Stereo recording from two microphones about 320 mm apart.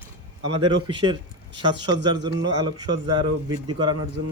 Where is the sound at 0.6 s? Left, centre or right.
Centre.